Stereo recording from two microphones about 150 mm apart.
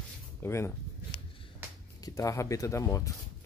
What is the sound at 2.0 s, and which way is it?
Speech, 20° left (ahead or behind).